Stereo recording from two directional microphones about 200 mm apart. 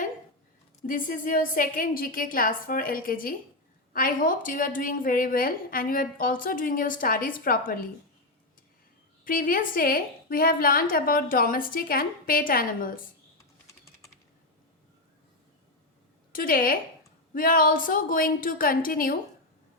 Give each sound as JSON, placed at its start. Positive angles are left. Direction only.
{"t": 0.8, "sound": "a woman's voice", "side_deg": 40}
{"t": 9.2, "sound": "a woman's voice", "side_deg": 45}
{"t": 13.7, "sound": "typing", "side_deg": 15}
{"t": 16.3, "sound": "a woman's voice", "side_deg": 45}